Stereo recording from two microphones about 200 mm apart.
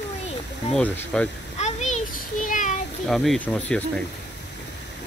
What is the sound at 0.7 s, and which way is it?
Speech, 5° left (ahead or behind).